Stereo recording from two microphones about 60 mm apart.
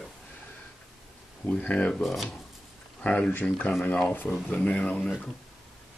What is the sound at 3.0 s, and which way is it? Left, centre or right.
Speech, left.